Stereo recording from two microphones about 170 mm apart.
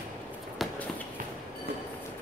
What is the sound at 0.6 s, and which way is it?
Walk, centre (ahead or behind).